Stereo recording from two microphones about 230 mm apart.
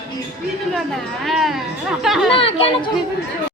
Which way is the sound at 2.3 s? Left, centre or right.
Left.